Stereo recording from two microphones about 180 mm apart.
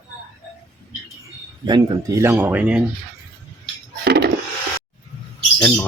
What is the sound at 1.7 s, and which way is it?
Speech, 20° right (ahead or behind).